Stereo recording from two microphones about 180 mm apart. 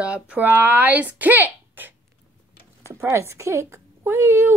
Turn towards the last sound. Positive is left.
turn(degrees=-15)  # may be behind; listen again after turning